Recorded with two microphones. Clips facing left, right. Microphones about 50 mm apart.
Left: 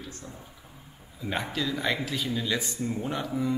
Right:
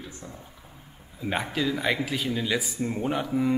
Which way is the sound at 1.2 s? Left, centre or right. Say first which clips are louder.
Right 3 dB; centre.